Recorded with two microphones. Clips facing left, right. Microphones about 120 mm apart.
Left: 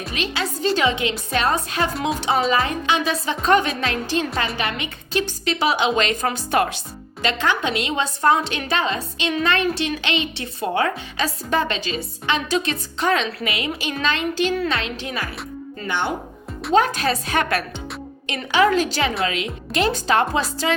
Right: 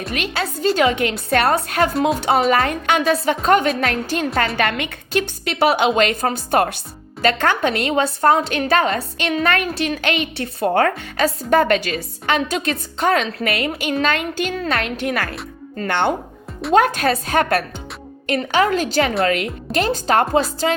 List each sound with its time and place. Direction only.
0.1 s a woman's voice: 45° right (ahead or behind)
1.9 s speech: centre (ahead or behind)
2.5 s speech: 55° right (ahead or behind)
4.4 s a woman's voice: 65° right (ahead or behind)
16.7 s speech: 50° right (ahead or behind)